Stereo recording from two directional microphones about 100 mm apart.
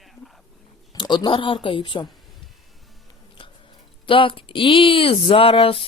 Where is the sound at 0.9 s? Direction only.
45° left (ahead or behind).